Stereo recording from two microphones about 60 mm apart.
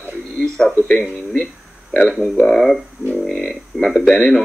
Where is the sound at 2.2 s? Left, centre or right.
Centre.